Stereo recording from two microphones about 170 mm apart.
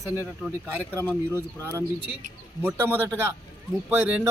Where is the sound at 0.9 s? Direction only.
10° left (ahead or behind).